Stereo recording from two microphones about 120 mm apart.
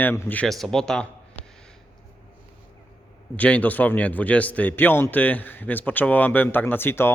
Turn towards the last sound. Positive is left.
turn(degrees=20)  # may be behind; listen again after turning